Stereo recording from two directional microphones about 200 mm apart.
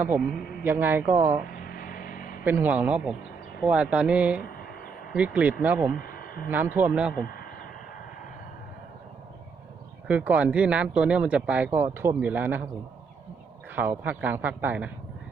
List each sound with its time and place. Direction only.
0.6 s speech: 10° right (ahead or behind)
1.5 s vehicle: 45° left (ahead or behind)
2.4 s speech: 10° right (ahead or behind)
5.9 s radio: 45° left (ahead or behind)
6.5 s speech: 10° right (ahead or behind)
7.1 s speech: 45° left (ahead or behind)
10.1 s speech: 5° right (ahead or behind)
13.7 s speech: 10° right (ahead or behind)